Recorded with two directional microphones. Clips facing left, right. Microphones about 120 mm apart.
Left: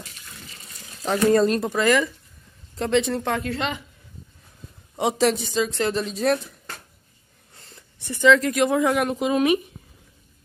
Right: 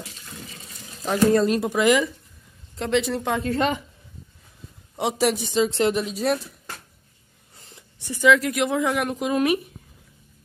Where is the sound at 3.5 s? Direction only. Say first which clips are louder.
Right 5 dB; 40° right (ahead or behind).